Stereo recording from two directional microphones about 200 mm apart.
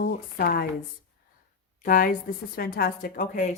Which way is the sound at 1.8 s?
45° left (ahead or behind).